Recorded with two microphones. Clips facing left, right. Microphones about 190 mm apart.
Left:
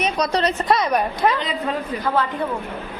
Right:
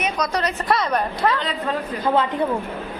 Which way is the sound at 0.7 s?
15° left (ahead or behind).